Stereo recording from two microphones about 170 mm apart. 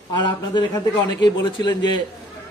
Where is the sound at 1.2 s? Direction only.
25° left (ahead or behind).